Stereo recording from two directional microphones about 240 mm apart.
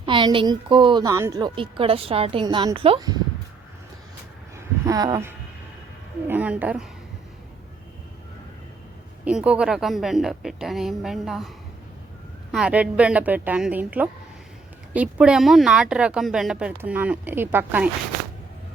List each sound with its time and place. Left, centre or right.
0.0 s a woman's voice: centre
4.5 s a sound: centre
6.2 s a woman's voice: centre
9.2 s a woman's voice: centre